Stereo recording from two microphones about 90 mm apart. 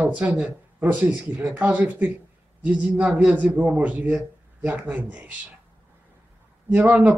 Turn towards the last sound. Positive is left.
turn(degrees=-15)  # may be behind; listen again after turning